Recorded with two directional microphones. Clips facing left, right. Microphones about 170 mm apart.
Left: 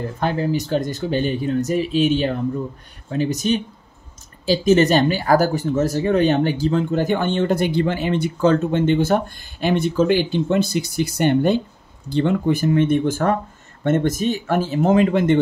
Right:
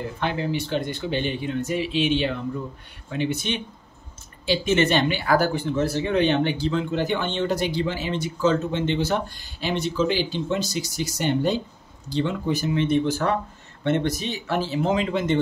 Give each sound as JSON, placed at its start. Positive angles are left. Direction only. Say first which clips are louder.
{"t": 0.2, "sound": "speech", "louder": "left 5 dB", "side_deg": 40}